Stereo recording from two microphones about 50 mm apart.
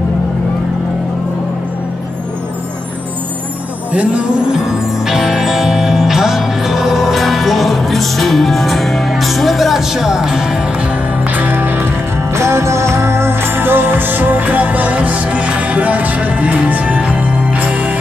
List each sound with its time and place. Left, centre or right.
3.9 s speech: right
4.5 s music: centre
11.3 s music: right
12.3 s music: right